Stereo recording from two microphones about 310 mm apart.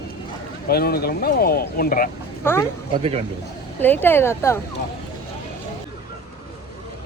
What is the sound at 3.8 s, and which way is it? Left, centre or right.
Speech, centre.